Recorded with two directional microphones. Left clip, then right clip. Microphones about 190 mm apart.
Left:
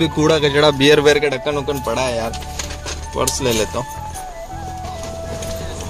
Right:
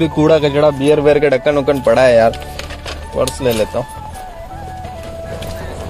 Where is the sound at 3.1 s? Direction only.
5° right (ahead or behind).